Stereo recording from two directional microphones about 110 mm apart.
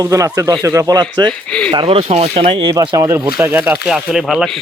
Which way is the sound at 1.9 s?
70° right (ahead or behind).